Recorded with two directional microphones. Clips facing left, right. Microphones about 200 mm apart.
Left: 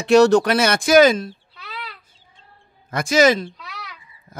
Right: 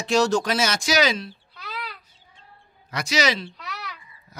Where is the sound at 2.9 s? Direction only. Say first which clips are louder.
Left 8 dB; 50° left (ahead or behind).